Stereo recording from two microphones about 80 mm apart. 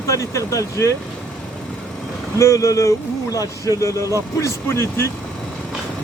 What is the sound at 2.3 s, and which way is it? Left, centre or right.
Speech, left.